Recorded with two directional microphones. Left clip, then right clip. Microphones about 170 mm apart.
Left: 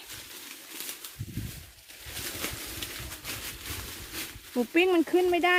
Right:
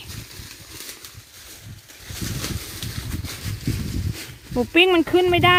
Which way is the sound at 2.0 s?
40° right (ahead or behind).